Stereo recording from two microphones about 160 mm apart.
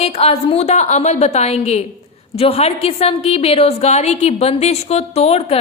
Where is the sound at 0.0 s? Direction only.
40° left (ahead or behind).